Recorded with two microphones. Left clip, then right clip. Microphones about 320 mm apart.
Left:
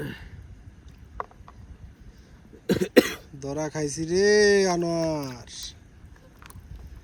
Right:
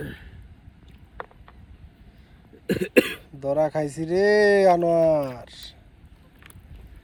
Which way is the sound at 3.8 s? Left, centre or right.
Left.